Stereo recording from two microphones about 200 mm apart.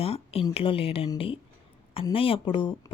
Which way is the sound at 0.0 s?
30° left (ahead or behind).